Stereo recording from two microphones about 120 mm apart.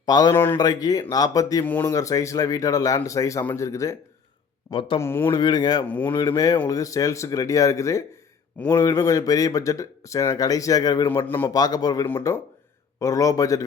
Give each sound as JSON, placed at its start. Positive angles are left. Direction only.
{"t": 0.0, "sound": "a man's voice", "side_deg": 35}
{"t": 0.3, "sound": "speech", "side_deg": 20}
{"t": 0.6, "sound": "a man's voice", "side_deg": 30}
{"t": 1.6, "sound": "a man's voice", "side_deg": 15}
{"t": 1.9, "sound": "speech", "side_deg": 25}
{"t": 4.7, "sound": "speech", "side_deg": 45}
{"t": 4.9, "sound": "speech", "side_deg": 20}
{"t": 5.4, "sound": "a man's voice", "side_deg": 35}
{"t": 5.9, "sound": "a man's voice", "side_deg": 15}
{"t": 6.1, "sound": "a man's voice", "side_deg": 30}
{"t": 11.1, "sound": "a man's voice", "side_deg": 15}
{"t": 11.5, "sound": "a man's voice", "side_deg": 35}
{"t": 12.0, "sound": "a man's voice", "side_deg": 15}
{"t": 13.0, "sound": "speech", "side_deg": 30}